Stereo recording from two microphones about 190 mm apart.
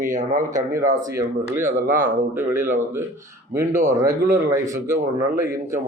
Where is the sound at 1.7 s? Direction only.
45° right (ahead or behind).